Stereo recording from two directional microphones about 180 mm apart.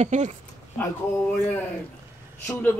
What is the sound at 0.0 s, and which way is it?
Speech, 40° right (ahead or behind).